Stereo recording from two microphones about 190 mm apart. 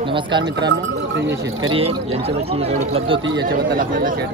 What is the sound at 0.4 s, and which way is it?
Speech, 65° right (ahead or behind).